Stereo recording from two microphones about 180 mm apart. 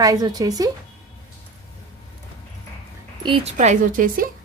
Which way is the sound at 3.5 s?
45° right (ahead or behind).